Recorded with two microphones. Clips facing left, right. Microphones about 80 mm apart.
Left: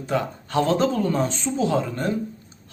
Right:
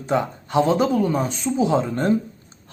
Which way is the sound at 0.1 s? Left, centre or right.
Right.